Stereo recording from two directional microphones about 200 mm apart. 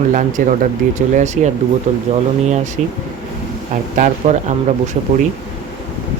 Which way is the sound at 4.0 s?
40° right (ahead or behind).